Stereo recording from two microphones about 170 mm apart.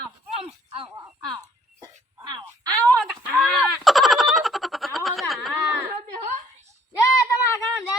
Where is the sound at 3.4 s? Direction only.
Centre (ahead or behind).